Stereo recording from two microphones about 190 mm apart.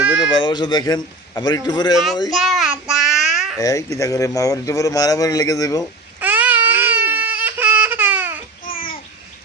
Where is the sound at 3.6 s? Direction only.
15° left (ahead or behind).